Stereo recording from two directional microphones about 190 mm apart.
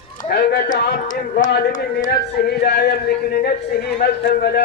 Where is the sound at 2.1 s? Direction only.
55° left (ahead or behind).